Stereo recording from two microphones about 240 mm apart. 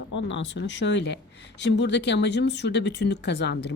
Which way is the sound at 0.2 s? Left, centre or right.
Left.